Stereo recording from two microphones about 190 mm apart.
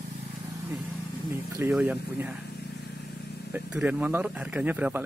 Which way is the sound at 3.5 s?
5° right (ahead or behind).